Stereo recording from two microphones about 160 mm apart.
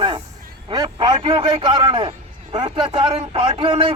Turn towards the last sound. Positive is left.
turn(degrees=-30)  # may be behind; listen again after turning